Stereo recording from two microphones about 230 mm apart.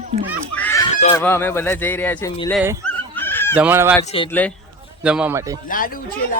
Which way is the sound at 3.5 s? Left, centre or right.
Centre.